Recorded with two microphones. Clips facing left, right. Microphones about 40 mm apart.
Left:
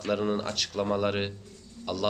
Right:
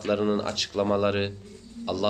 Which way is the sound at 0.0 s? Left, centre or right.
Centre.